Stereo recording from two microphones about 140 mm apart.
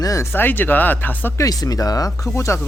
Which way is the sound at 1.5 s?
25° left (ahead or behind).